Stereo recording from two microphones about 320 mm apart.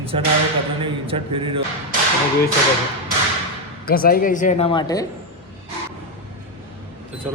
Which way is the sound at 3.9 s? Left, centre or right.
Left.